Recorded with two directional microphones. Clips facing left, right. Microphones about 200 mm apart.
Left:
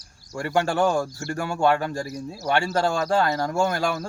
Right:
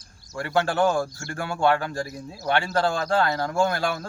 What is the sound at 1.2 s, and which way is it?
Speech, 40° left (ahead or behind).